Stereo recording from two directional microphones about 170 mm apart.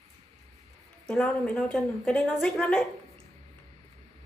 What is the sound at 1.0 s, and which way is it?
A woman's voice, 5° left (ahead or behind).